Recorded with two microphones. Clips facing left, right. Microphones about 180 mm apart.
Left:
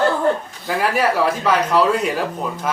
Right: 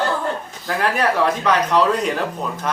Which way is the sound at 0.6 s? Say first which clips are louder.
Left 1 dB; 5° left (ahead or behind).